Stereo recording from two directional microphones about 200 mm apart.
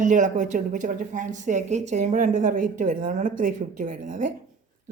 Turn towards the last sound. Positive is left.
turn(degrees=-40)  # may be behind; listen again after turning